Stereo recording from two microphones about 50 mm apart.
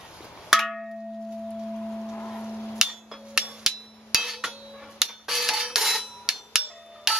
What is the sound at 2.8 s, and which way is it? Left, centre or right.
Hammer, centre.